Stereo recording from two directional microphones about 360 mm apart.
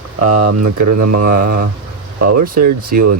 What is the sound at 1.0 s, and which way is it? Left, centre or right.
Mantra, right.